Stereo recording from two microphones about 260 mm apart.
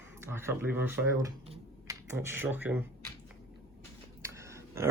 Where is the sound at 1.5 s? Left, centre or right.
Centre.